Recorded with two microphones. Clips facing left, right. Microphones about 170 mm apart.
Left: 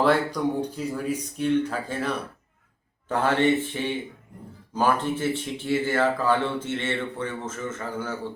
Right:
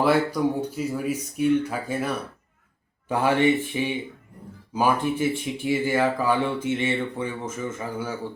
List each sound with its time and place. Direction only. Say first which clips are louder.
0.0 s speech: right 1 dB; 5° right (ahead or behind)